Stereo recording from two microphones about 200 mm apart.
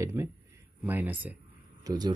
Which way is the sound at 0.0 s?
15° right (ahead or behind).